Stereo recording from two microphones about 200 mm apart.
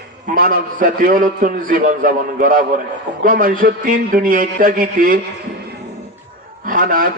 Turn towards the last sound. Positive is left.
turn(degrees=-45)  # may be behind; listen again after turning